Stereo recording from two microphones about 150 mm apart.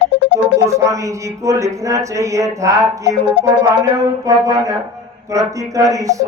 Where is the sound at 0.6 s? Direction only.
20° right (ahead or behind).